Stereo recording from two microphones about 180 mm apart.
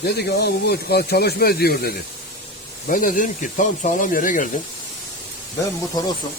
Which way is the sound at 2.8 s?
45° left (ahead or behind).